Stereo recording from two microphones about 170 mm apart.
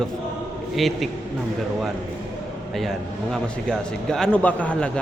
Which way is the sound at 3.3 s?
5° left (ahead or behind).